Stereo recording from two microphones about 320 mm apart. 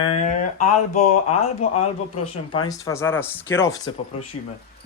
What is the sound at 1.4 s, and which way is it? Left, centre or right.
Speech, centre.